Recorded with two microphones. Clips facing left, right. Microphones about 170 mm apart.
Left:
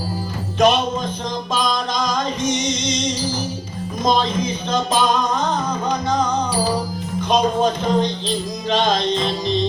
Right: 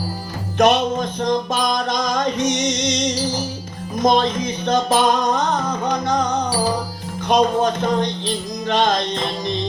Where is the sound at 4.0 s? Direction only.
55° right (ahead or behind).